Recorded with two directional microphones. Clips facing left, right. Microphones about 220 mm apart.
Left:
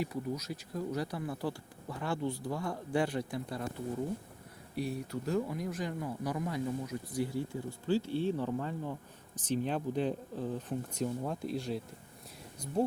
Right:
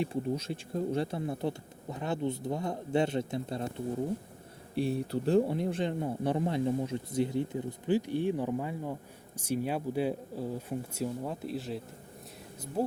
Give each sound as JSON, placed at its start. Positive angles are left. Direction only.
{"t": 0.0, "sound": "speech", "side_deg": -25}